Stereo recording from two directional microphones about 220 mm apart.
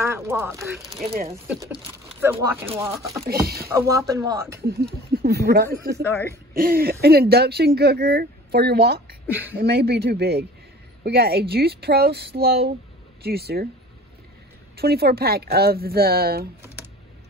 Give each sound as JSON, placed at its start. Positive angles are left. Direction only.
{"t": 0.0, "sound": "speech", "side_deg": -10}
{"t": 0.6, "sound": "speech", "side_deg": 0}
{"t": 1.0, "sound": "speech", "side_deg": -30}
{"t": 1.3, "sound": "speech", "side_deg": -10}
{"t": 4.6, "sound": "speech", "side_deg": -45}
{"t": 9.3, "sound": "speech", "side_deg": -10}
{"t": 9.6, "sound": "speech", "side_deg": -45}
{"t": 14.8, "sound": "speech", "side_deg": -45}